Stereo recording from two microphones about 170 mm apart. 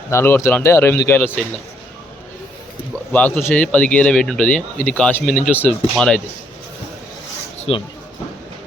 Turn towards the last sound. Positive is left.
turn(degrees=35)  # may be behind; listen again after turning